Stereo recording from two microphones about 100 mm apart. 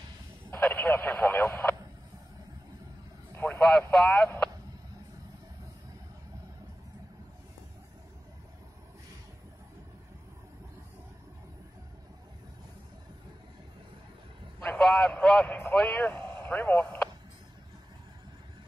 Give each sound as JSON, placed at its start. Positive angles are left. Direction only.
{"t": 0.5, "sound": "radio", "side_deg": 20}
{"t": 3.3, "sound": "vehicle", "side_deg": 25}
{"t": 3.6, "sound": "vehicle", "side_deg": 5}
{"t": 14.6, "sound": "a sound", "side_deg": 10}
{"t": 15.7, "sound": "vehicle", "side_deg": 10}